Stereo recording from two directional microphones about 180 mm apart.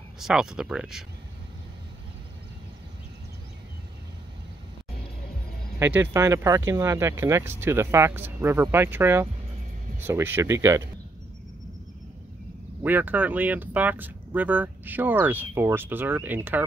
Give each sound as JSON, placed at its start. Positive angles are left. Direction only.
{"t": 0.2, "sound": "speech", "side_deg": -5}
{"t": 5.8, "sound": "speech", "side_deg": -15}
{"t": 12.8, "sound": "speech", "side_deg": -10}